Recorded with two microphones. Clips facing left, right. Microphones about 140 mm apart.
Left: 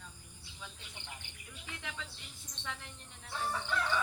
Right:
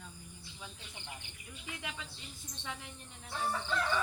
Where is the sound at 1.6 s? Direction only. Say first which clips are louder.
Right 1 dB; 15° right (ahead or behind).